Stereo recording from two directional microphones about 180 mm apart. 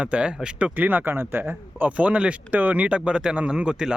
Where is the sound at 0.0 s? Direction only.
5° right (ahead or behind).